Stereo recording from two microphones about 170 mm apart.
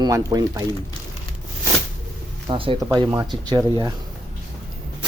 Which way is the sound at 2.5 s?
30° right (ahead or behind).